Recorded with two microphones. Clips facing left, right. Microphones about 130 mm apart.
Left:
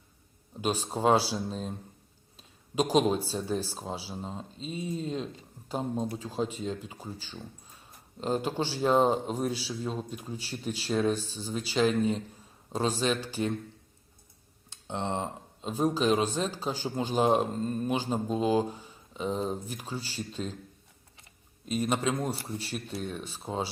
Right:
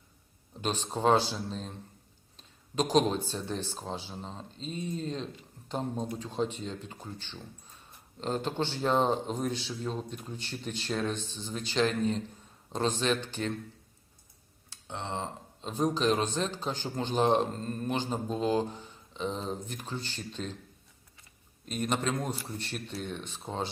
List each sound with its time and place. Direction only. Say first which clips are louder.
0.6 s a man's voice: left 1 dB; 10° left (ahead or behind)
2.7 s a man's voice: left 1 dB; 10° left (ahead or behind)
14.7 s a sound: left 5 dB; 20° left (ahead or behind)
15.6 s a man's voice: left 1 dB; 5° left (ahead or behind)
21.7 s speech: left 2 dB; 5° left (ahead or behind)